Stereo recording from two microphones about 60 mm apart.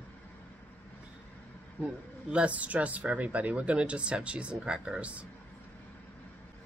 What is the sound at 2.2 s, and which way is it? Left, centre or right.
Speech, right.